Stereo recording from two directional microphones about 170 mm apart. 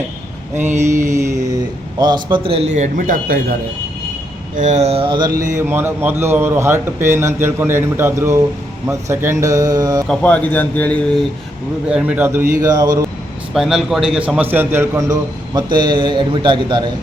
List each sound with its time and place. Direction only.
0.8 s a man's voice: 15° right (ahead or behind); by 3.4 s 55° right (ahead or behind)
4.5 s a man's voice: 45° right (ahead or behind); by 5.4 s 25° right (ahead or behind)
5.5 s a man's voice: 15° right (ahead or behind)
10.1 s a man's voice: 10° left (ahead or behind)
11.9 s a man's voice: 5° right (ahead or behind); by 13.0 s 20° right (ahead or behind)
13.5 s a man's voice: centre (ahead or behind); by 16.9 s 25° right (ahead or behind)